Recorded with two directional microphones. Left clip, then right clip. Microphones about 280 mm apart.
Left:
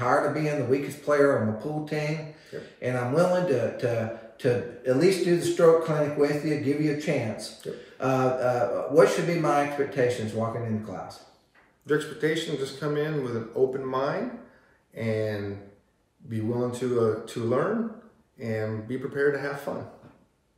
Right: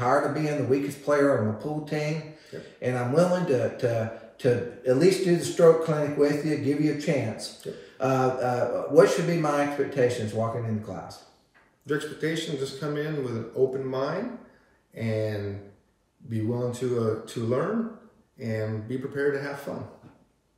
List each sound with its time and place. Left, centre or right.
0.0 s a man's voice: centre
11.8 s a man's voice: centre